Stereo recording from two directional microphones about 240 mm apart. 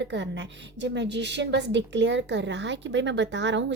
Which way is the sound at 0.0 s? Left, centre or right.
Right.